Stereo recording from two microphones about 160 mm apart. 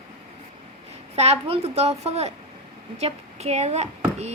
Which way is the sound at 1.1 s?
40° right (ahead or behind).